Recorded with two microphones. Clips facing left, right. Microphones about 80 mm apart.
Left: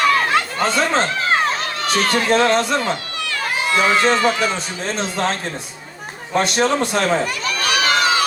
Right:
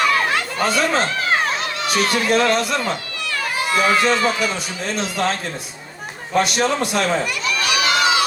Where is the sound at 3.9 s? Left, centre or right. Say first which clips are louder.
Left 1 dB; left.